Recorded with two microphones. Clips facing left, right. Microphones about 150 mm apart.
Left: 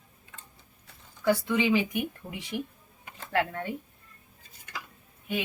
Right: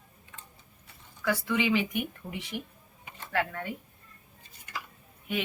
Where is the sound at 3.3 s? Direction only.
25° left (ahead or behind).